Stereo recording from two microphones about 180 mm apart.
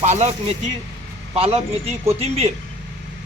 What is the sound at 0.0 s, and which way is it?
A man's voice, 40° right (ahead or behind).